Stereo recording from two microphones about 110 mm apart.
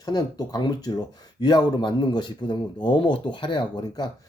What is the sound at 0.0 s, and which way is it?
Speech, 35° left (ahead or behind).